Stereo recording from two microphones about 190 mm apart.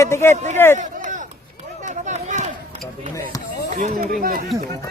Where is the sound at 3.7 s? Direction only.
45° right (ahead or behind).